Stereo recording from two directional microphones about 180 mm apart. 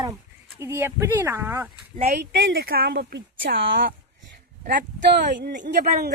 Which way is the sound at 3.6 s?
90° right.